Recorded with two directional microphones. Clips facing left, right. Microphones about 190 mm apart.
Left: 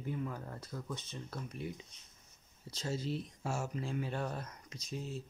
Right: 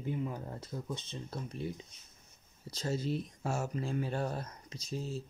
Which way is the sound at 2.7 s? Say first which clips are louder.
Right 3 dB; 40° right (ahead or behind).